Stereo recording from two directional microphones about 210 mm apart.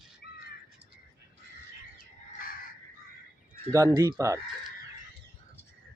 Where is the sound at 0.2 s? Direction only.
50° left (ahead or behind).